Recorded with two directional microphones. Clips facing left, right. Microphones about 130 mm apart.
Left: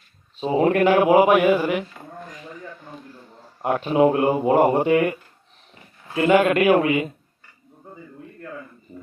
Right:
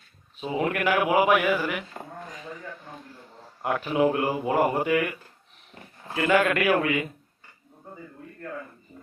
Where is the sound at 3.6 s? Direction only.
25° left (ahead or behind).